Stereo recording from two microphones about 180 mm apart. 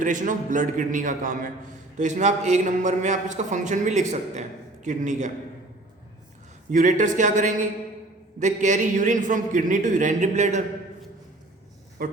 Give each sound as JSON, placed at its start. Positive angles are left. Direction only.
{"t": 0.0, "sound": "a man's voice", "side_deg": -45}
{"t": 6.7, "sound": "a man's voice", "side_deg": -45}
{"t": 12.0, "sound": "a man's voice", "side_deg": -55}